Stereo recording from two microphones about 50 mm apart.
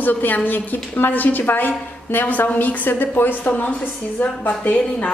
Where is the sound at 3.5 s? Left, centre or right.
Left.